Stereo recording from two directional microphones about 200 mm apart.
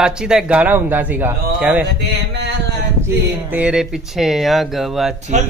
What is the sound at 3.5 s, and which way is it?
Speech, 5° right (ahead or behind).